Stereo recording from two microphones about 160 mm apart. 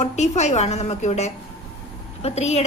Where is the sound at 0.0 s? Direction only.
45° left (ahead or behind).